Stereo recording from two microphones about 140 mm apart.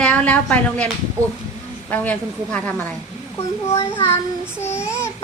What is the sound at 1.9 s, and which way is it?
A child's voice, 10° left (ahead or behind).